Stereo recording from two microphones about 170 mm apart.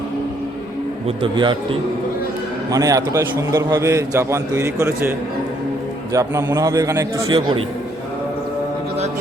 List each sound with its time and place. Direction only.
1.0 s a man's voice: 30° right (ahead or behind); by 5.1 s 15° right (ahead or behind)
6.1 s a man's voice: 20° right (ahead or behind)
7.3 s a man's voice: 30° right (ahead or behind)